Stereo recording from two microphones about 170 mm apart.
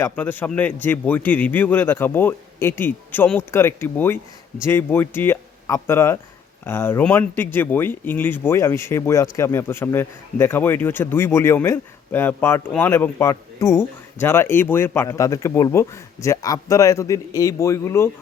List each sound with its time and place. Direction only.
0.0 s a man's voice: 10° left (ahead or behind)